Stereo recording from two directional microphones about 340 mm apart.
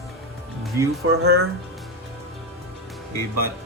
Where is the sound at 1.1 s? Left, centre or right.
Right.